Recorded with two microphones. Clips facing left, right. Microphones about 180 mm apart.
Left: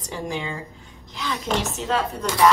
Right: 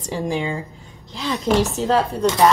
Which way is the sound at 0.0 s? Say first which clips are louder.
Right 6 dB; 30° right (ahead or behind).